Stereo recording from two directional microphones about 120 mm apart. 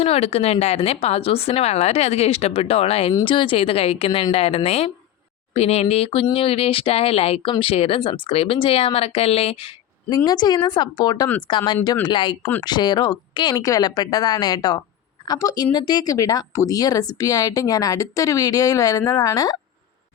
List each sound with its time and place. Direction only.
0.0 s speech: 55° left (ahead or behind)
10.2 s speech: 35° left (ahead or behind)